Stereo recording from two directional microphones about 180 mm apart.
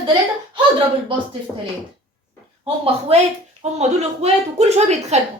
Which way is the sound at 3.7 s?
35° right (ahead or behind).